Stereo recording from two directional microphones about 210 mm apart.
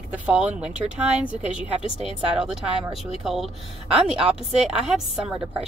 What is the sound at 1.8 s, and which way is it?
Speech, 25° left (ahead or behind).